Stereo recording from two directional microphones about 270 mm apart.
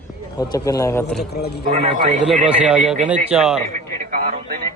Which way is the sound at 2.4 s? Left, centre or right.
Centre.